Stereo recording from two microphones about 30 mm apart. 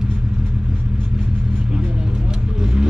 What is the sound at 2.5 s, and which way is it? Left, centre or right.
Vehicle, right.